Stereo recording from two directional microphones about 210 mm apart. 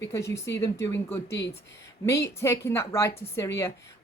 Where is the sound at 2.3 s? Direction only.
10° left (ahead or behind).